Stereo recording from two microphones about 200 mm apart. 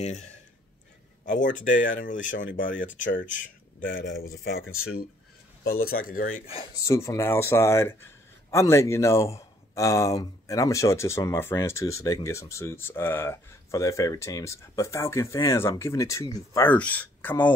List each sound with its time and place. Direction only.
0.0 s a man's voice: 35° left (ahead or behind)
4.6 s speech: 90° left
5.6 s a man's voice: 50° left (ahead or behind)
6.4 s speech: 25° left (ahead or behind)
6.8 s a man's voice: 15° left (ahead or behind)